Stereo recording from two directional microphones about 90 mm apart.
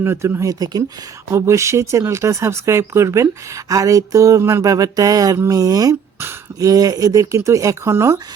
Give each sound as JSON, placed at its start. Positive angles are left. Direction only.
{"t": 0.0, "sound": "speech", "side_deg": -30}